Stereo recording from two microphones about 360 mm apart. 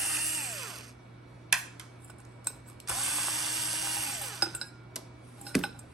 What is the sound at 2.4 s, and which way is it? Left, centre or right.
Drill, centre.